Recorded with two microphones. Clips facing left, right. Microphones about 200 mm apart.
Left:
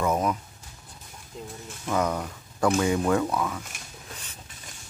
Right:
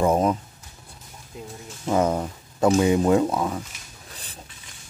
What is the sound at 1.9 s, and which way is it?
Speech, 25° right (ahead or behind).